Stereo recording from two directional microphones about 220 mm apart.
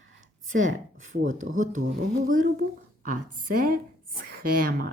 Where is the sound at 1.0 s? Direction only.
35° right (ahead or behind).